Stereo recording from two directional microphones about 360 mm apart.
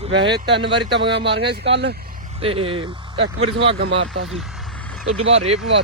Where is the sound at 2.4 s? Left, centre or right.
Centre.